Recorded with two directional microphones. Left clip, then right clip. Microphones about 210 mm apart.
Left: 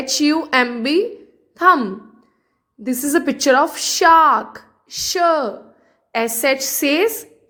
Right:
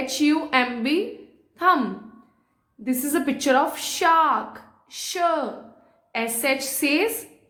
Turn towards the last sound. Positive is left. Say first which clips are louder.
# left 5 dB
turn(degrees=40)  # may be behind; listen again after turning